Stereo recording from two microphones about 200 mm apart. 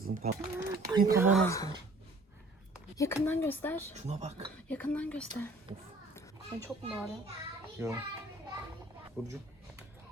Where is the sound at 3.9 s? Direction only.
35° right (ahead or behind).